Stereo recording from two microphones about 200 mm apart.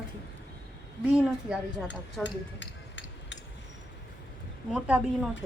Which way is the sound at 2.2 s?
65° left (ahead or behind).